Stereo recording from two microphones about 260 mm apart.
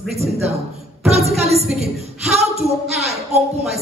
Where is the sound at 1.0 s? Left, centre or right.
Right.